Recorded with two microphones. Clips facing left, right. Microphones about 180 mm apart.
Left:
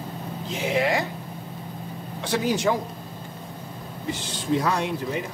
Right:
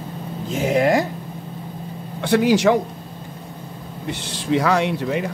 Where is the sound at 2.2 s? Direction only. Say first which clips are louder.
Right 8 dB; 65° right (ahead or behind).